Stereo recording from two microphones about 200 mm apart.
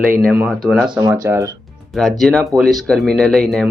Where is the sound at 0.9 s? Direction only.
15° right (ahead or behind).